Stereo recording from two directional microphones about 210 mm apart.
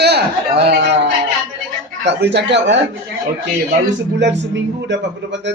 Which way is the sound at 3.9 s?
60° right (ahead or behind).